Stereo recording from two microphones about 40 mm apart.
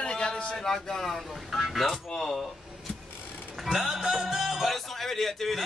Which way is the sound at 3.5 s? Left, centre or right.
Centre.